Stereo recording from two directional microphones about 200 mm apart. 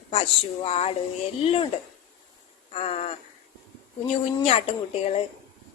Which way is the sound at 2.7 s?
30° left (ahead or behind).